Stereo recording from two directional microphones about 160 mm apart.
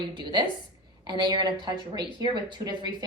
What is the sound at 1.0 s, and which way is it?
Speech, 25° right (ahead or behind).